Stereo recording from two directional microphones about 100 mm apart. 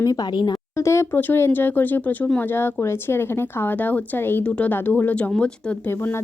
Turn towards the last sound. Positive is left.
turn(degrees=10)  # may be behind; listen again after turning